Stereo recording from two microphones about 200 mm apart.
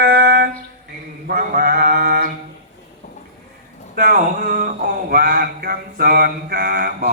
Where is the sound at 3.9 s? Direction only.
45° right (ahead or behind).